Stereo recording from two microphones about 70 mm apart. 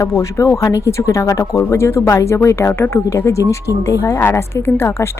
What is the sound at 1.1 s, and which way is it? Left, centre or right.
Speech, left.